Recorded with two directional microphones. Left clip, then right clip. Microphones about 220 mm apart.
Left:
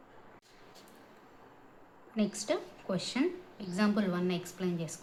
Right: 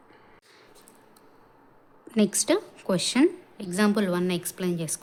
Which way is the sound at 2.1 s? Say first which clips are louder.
Right 9 dB; 50° right (ahead or behind).